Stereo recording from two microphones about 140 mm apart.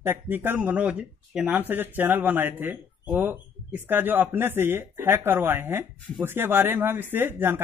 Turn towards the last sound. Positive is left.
turn(degrees=-15)  # may be behind; listen again after turning